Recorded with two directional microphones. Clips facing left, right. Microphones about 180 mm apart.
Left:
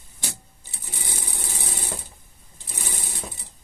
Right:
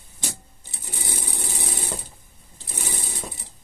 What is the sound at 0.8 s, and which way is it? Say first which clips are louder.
Sewing machine: right 3 dB; 15° right (ahead or behind).